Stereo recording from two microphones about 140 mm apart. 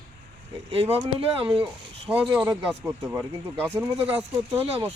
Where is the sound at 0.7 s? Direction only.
45° right (ahead or behind).